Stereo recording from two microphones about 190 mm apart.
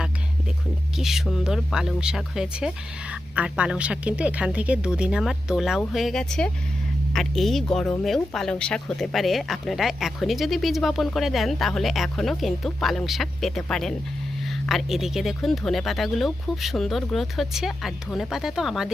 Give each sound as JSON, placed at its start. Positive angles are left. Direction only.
{"t": 0.9, "sound": "speech", "side_deg": 0}